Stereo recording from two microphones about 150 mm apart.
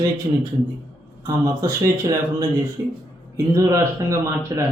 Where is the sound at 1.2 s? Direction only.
20° right (ahead or behind).